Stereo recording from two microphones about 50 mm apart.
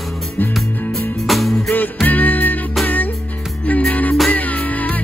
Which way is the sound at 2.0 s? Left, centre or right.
Left.